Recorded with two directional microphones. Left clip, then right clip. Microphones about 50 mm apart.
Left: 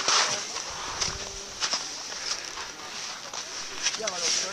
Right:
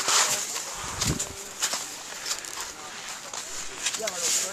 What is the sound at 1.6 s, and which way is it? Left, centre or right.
Walk, right.